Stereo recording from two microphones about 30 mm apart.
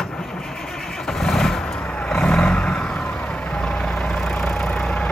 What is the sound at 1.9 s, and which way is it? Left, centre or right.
Vehicle, left.